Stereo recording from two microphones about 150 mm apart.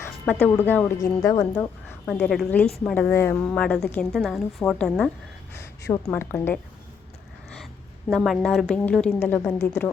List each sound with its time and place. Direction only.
0.4 s a woman's voice: 10° left (ahead or behind)
1.2 s a woman's voice: 25° left (ahead or behind)
2.3 s a woman's voice: centre (ahead or behind)
5.5 s a woman's voice: 20° left (ahead or behind)
8.1 s a woman's voice: centre (ahead or behind)